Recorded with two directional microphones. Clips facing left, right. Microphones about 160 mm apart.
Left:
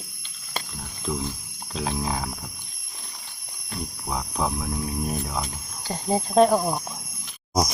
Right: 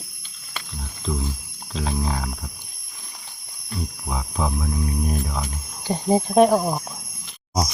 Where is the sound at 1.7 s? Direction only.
Centre (ahead or behind).